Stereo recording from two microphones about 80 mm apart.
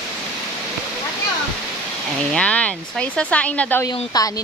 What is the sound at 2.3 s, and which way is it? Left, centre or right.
Speech, centre.